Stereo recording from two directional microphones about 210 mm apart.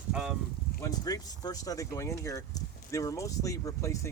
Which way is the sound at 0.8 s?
15° left (ahead or behind).